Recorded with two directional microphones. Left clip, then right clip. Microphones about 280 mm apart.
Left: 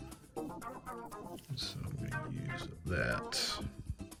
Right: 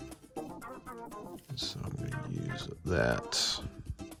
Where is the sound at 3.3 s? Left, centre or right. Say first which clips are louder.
Right 5 dB; centre.